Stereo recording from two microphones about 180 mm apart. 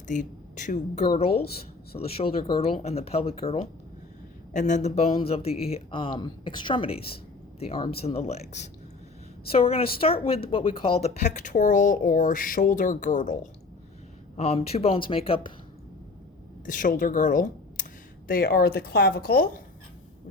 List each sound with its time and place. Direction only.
0.1 s speech: 45° left (ahead or behind)
1.0 s a woman's voice: 30° left (ahead or behind); by 13.5 s 45° left (ahead or behind)
14.3 s speech: 35° left (ahead or behind)
16.6 s a woman's voice: 50° left (ahead or behind)